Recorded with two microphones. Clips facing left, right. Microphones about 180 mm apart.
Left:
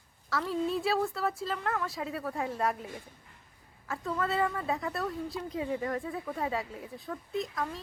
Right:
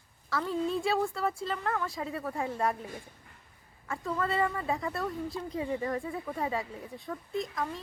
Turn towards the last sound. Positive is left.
turn(degrees=0)  # may be behind; listen again after turning